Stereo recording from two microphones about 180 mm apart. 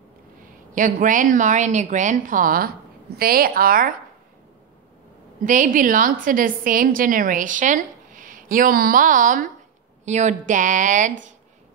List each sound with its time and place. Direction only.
0.4 s a woman's voice: 50° right (ahead or behind)
5.4 s a woman's voice: 45° right (ahead or behind)